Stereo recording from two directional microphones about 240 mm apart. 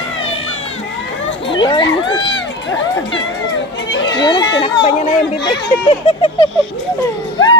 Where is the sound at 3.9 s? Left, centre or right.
Left.